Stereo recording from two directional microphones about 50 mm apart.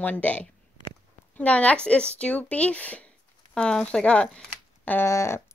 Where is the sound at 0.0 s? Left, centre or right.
Left.